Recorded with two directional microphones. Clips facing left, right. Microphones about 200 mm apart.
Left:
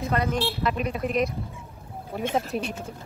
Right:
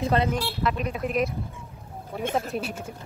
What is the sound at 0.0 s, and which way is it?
Speech, 30° right (ahead or behind).